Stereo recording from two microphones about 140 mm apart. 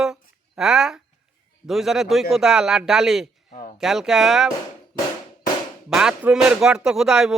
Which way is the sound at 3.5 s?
75° left (ahead or behind).